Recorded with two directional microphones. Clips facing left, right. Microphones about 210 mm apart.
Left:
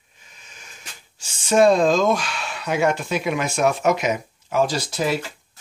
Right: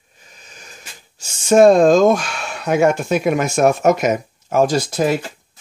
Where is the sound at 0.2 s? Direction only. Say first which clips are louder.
Right 5 dB; 40° right (ahead or behind).